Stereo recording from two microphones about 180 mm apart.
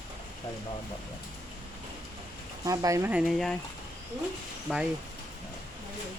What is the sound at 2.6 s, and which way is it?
Speech, 20° right (ahead or behind).